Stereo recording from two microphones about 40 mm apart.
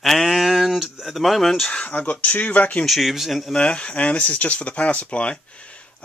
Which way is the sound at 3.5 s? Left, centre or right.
Left.